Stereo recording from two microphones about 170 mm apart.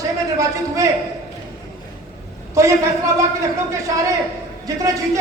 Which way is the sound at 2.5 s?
15° right (ahead or behind).